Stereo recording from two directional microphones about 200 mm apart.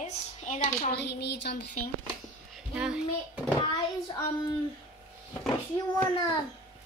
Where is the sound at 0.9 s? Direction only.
55° left (ahead or behind).